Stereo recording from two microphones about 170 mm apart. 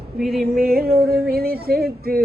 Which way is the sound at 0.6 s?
65° right (ahead or behind).